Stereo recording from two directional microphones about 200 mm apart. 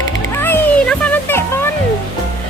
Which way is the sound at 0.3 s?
10° left (ahead or behind).